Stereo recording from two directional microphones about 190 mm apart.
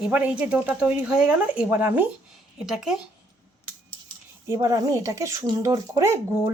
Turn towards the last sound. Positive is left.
turn(degrees=-15)  # may be behind; listen again after turning